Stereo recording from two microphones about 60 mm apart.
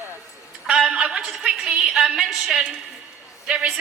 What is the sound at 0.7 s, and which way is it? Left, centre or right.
A woman's voice, centre.